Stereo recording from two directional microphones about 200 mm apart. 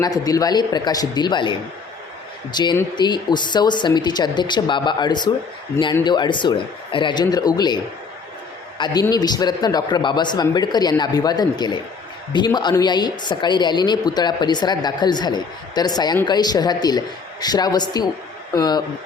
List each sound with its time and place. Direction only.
0.0 s a woman's voice: 20° left (ahead or behind)
8.8 s a woman's voice: 20° left (ahead or behind)